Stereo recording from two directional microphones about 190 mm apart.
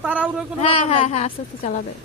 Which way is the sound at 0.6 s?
30° left (ahead or behind).